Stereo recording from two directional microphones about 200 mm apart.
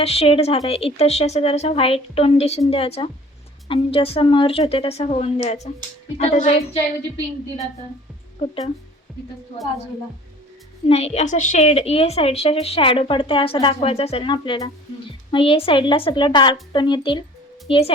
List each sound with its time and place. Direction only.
0.0 s a woman's voice: 30° left (ahead or behind)
10.8 s a woman's voice: 30° left (ahead or behind)